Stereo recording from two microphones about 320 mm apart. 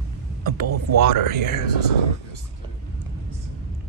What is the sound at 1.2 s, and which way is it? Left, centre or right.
Speech, right.